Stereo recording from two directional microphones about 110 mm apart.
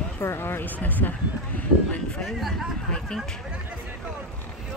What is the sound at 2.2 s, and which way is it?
A woman's voice, centre (ahead or behind).